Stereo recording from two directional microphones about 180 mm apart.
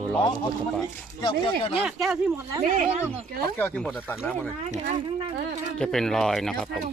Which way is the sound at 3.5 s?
10° left (ahead or behind).